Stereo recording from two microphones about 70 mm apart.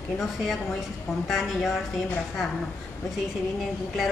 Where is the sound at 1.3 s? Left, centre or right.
Centre.